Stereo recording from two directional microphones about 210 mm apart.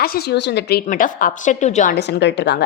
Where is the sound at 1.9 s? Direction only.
50° left (ahead or behind).